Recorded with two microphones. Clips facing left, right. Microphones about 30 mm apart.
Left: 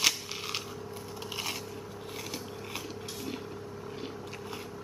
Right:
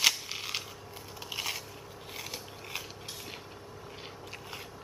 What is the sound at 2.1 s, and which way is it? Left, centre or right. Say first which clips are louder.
Scissors: left 2 dB; centre.